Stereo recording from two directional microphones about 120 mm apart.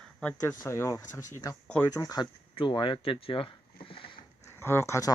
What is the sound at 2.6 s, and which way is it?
Speech, 40° left (ahead or behind).